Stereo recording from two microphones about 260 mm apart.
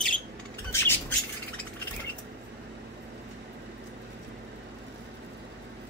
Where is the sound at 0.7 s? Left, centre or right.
Centre.